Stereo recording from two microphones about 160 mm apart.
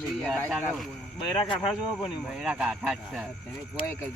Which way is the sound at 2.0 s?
Centre (ahead or behind).